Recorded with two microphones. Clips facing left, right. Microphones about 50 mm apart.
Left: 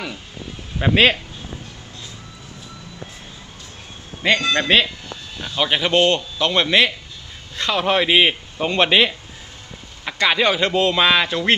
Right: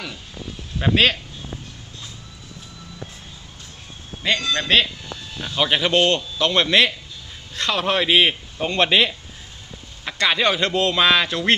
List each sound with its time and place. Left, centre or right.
0.8 s speech: centre
4.2 s a man's voice: left
5.5 s speech: centre
5.9 s speech: left